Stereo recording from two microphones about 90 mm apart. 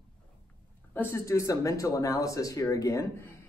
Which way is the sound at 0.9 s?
25° left (ahead or behind).